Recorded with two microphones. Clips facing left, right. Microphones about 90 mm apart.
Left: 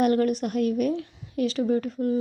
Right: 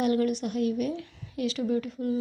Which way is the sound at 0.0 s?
45° left (ahead or behind).